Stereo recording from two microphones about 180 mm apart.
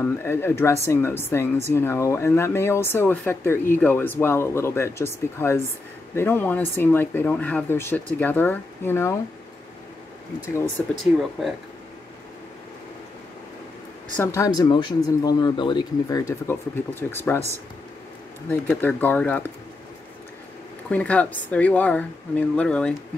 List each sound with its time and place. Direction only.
0.0 s speech: 10° left (ahead or behind)
10.8 s speech: 5° left (ahead or behind)
14.1 s speech: 15° left (ahead or behind)
14.7 s speech: 25° left (ahead or behind)
18.5 s speech: 10° left (ahead or behind)
20.9 s speech: 5° left (ahead or behind)